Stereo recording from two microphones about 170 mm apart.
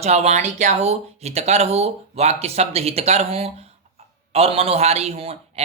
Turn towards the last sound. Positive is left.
turn(degrees=-35)  # may be behind; listen again after turning